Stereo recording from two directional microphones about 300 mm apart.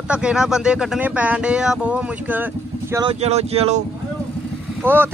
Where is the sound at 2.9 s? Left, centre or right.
Centre.